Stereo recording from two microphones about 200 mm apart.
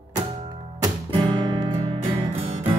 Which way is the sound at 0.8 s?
20° right (ahead or behind).